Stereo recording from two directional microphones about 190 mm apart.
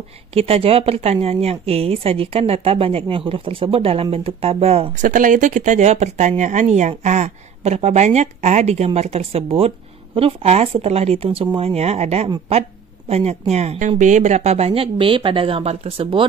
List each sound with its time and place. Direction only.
0.3 s speech: 30° right (ahead or behind)
5.0 s speech: 45° right (ahead or behind); by 16.3 s 25° right (ahead or behind)